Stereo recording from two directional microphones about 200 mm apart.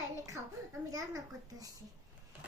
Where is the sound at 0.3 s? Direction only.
15° right (ahead or behind).